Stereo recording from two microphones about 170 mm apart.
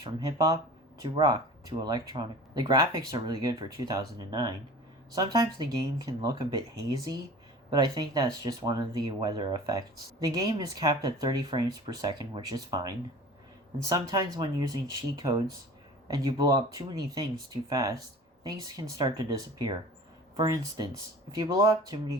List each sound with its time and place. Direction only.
0.0 s speech: 20° right (ahead or behind)
14.1 s speech: 25° right (ahead or behind)